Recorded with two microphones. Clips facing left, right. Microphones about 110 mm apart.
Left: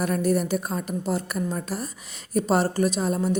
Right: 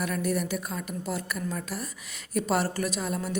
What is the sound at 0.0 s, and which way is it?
A woman's voice, 35° left (ahead or behind).